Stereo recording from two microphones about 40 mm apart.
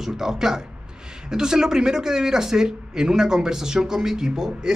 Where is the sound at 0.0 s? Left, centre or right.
Centre.